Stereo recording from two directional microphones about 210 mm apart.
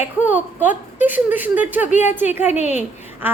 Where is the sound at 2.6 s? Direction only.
35° left (ahead or behind).